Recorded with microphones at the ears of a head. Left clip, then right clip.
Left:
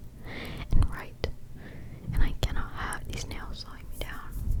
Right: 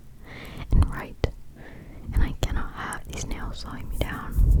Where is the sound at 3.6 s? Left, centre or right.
Right.